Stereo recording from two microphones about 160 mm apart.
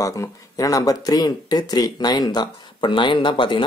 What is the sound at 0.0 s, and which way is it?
Speech, 20° left (ahead or behind).